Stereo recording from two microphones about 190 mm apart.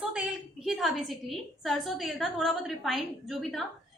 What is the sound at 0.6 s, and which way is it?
A woman's voice, centre (ahead or behind).